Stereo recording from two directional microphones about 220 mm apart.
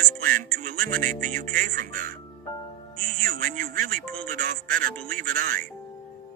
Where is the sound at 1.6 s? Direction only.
40° right (ahead or behind).